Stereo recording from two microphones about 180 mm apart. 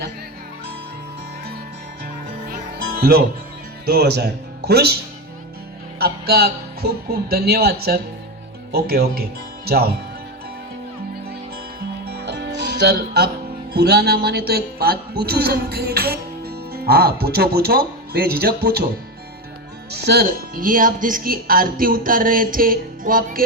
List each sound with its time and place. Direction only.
2.5 s music: 55° right (ahead or behind)
3.8 s speech: 60° right (ahead or behind)
6.0 s speech: 60° right (ahead or behind)
12.0 s music: 65° right (ahead or behind)
13.7 s speech: 65° right (ahead or behind)
19.9 s speech: 65° right (ahead or behind)